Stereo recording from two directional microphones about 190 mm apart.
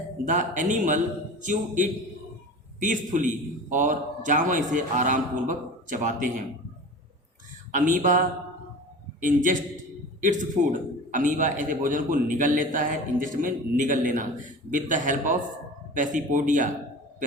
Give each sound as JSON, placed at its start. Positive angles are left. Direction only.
{"t": 0.3, "sound": "a man's voice", "side_deg": -40}
{"t": 7.7, "sound": "a man's voice", "side_deg": -45}
{"t": 9.2, "sound": "a man's voice", "side_deg": -45}